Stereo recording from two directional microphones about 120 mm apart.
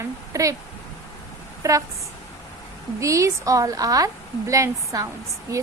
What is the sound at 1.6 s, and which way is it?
Speech, 25° right (ahead or behind).